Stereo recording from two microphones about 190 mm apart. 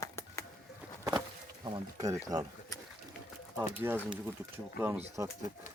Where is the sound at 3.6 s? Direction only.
10° right (ahead or behind).